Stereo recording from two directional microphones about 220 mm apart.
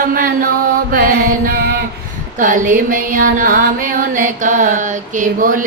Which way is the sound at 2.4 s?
35° right (ahead or behind).